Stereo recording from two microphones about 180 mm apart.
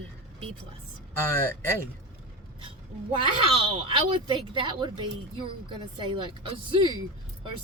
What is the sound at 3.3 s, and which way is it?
A woman's voice, 30° right (ahead or behind).